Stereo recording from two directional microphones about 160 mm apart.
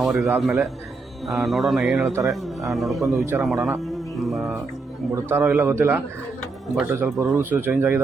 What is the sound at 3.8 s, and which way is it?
Music, centre (ahead or behind).